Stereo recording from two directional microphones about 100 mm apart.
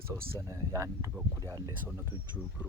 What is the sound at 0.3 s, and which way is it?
Speech, 30° right (ahead or behind).